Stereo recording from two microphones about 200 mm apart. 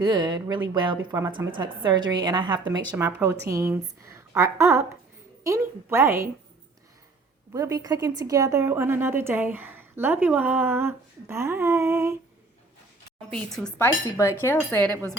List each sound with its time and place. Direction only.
0.0 s a woman's voice: 20° right (ahead or behind)
2.9 s a woman's voice: 10° right (ahead or behind)
7.5 s a woman's voice: 15° right (ahead or behind)
13.3 s cutlery: 5° left (ahead or behind)